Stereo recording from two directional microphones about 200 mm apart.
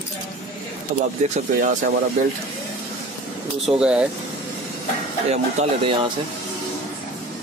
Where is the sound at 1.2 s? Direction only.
35° right (ahead or behind).